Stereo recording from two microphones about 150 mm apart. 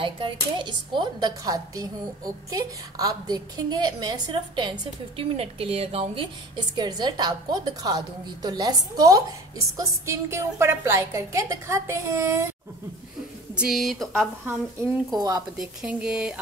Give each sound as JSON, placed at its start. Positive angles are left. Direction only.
{"t": 0.0, "sound": "speech", "side_deg": -35}
{"t": 13.6, "sound": "speech", "side_deg": 0}
{"t": 15.1, "sound": "speech", "side_deg": -25}
{"t": 15.5, "sound": "speech", "side_deg": -5}